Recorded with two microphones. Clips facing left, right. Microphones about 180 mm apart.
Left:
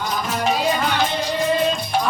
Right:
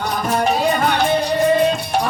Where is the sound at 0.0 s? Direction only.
55° right (ahead or behind).